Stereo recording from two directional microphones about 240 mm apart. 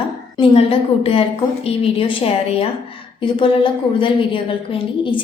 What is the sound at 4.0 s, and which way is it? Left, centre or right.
A woman's voice, left.